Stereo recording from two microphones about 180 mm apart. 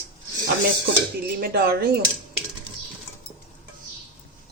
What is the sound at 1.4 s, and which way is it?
Speech, 55° right (ahead or behind).